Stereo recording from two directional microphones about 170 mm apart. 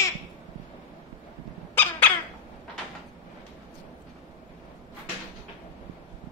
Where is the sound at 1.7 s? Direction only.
10° left (ahead or behind).